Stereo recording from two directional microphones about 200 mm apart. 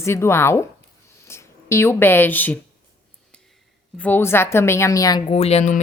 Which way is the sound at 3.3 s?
5° left (ahead or behind).